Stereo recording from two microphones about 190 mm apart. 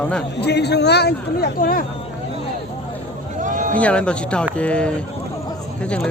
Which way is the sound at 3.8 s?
5° left (ahead or behind).